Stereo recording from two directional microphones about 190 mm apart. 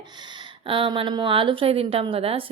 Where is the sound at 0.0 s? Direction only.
25° right (ahead or behind).